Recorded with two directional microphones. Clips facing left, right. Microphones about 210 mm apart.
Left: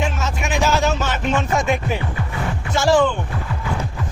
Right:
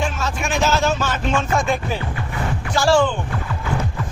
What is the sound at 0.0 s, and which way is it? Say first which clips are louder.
Music: even; 20° left (ahead or behind).